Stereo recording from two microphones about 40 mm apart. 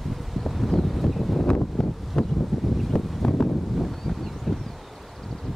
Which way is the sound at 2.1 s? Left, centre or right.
Centre.